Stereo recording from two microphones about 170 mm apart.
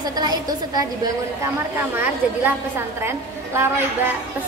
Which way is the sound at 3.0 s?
15° right (ahead or behind).